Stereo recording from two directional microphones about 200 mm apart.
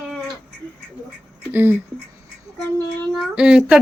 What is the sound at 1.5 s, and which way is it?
Speech, 10° right (ahead or behind).